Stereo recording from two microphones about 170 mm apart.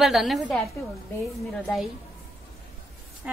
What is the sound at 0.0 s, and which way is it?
Speech, centre (ahead or behind).